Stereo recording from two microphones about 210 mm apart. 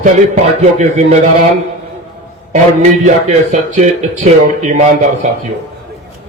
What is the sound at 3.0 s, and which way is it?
Speech, 35° right (ahead or behind).